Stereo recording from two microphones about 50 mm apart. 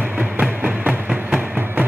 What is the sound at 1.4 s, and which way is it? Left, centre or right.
Music, right.